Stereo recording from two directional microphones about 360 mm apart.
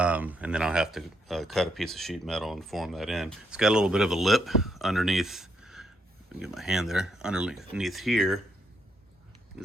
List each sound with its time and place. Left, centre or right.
0.0 s speech: centre
9.5 s pig: centre